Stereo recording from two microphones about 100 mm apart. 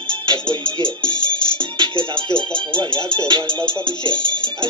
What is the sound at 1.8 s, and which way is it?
Music, 55° right (ahead or behind).